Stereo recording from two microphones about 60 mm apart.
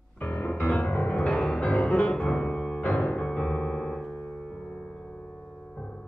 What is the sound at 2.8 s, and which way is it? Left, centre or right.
Piano, centre.